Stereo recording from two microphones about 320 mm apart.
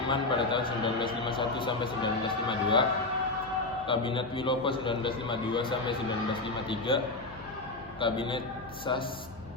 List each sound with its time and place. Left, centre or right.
0.1 s a man's voice: centre
3.8 s a man's voice: centre